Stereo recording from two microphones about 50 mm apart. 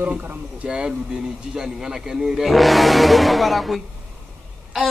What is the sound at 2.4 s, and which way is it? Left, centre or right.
Speech, centre.